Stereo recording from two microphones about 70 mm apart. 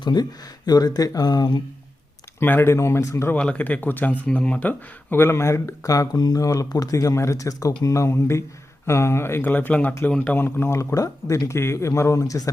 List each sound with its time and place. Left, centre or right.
0.0 s speech: left
2.4 s speech: left
2.7 s speech: left
3.3 s speech: centre; by 6.1 s left
6.1 s speech: left; by 10.3 s centre
10.3 s speech: left
10.9 s speech: left